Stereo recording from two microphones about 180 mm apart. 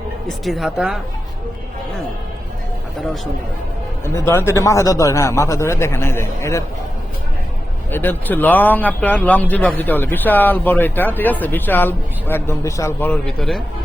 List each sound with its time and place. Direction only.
0.3 s speech: centre (ahead or behind)
4.0 s speech: 15° left (ahead or behind)
7.9 s speech: 10° left (ahead or behind)